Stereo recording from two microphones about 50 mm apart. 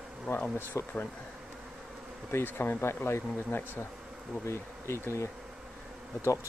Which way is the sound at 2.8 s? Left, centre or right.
Left.